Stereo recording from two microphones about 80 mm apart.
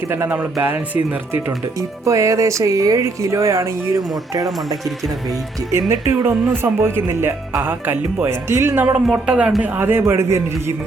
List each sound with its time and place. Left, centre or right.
0.6 s speech: right
2.0 s speech: right
5.9 s speech: right
9.1 s a man's voice: centre
9.6 s speech: right
10.0 s speech: right